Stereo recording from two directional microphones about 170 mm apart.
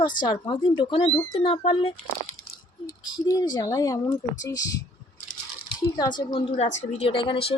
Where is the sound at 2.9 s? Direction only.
20° left (ahead or behind).